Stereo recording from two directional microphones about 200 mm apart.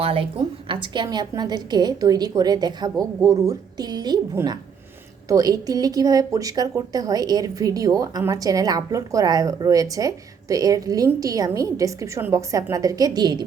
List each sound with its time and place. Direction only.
0.0 s a woman's voice: 30° right (ahead or behind)